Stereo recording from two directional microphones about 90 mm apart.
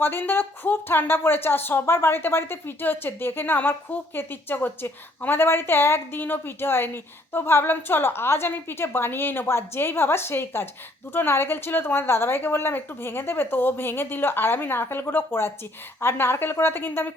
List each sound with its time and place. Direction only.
0.0 s speech: 25° left (ahead or behind)